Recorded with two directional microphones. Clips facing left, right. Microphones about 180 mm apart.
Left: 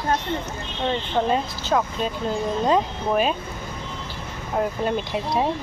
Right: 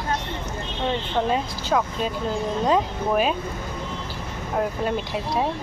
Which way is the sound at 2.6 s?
5° right (ahead or behind).